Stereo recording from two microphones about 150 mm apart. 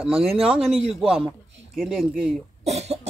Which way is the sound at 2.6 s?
45° right (ahead or behind).